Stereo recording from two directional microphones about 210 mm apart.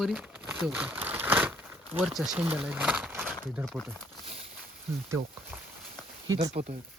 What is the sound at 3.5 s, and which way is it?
Speech, centre (ahead or behind).